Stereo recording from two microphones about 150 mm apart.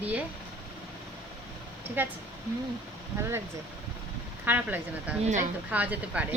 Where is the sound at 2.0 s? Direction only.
10° right (ahead or behind).